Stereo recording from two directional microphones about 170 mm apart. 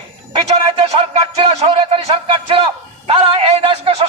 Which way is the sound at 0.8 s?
30° right (ahead or behind).